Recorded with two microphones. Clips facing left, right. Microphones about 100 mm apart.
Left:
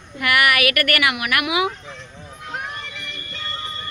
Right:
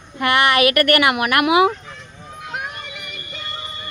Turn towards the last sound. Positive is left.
turn(degrees=-15)  # may be behind; listen again after turning